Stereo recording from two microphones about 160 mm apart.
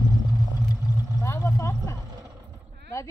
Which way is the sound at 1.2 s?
20° left (ahead or behind).